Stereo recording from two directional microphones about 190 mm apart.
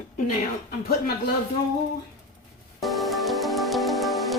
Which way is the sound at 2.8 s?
Centre (ahead or behind).